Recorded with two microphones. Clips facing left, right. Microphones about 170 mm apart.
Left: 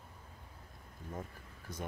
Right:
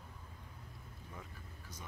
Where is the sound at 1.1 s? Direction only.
50° left (ahead or behind).